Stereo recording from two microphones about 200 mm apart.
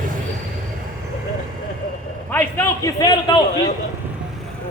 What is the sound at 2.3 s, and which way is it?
A man's voice, 10° left (ahead or behind).